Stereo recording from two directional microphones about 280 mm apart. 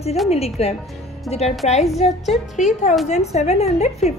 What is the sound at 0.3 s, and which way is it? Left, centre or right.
Speech, left.